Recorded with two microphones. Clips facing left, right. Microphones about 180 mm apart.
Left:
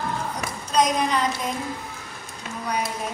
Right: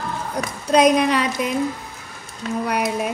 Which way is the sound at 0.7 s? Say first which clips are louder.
Right 7 dB; 65° right (ahead or behind).